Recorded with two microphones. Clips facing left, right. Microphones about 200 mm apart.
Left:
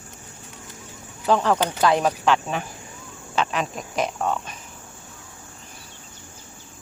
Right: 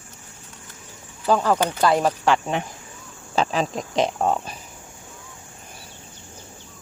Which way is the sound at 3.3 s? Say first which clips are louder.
Right 3 dB; 35° right (ahead or behind).